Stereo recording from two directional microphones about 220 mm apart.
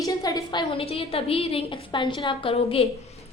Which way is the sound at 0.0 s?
15° left (ahead or behind).